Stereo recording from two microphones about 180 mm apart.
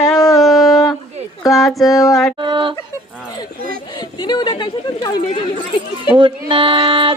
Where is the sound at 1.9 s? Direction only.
20° left (ahead or behind).